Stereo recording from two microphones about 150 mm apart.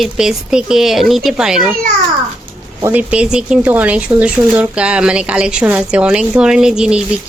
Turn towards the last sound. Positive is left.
turn(degrees=-5)  # may be behind; listen again after turning